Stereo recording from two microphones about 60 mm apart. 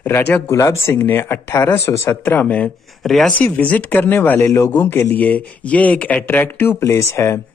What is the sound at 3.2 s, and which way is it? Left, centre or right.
Speech, left.